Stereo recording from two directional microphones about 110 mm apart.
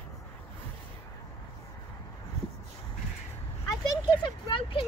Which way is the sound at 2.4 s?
70° right (ahead or behind).